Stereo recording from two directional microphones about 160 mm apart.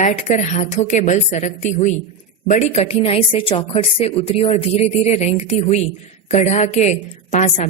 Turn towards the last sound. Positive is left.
turn(degrees=45)  # may be behind; listen again after turning